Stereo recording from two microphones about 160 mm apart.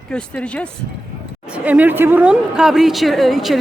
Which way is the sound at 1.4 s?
10° right (ahead or behind).